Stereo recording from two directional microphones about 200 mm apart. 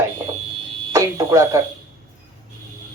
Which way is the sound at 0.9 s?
15° right (ahead or behind).